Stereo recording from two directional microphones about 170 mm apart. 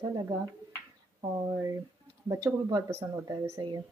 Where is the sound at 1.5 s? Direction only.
20° right (ahead or behind).